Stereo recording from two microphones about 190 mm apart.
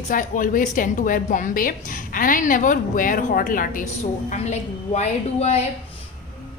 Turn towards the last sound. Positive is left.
turn(degrees=35)  # may be behind; listen again after turning